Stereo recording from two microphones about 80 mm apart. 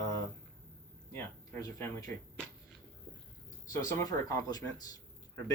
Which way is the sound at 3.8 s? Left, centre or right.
Left.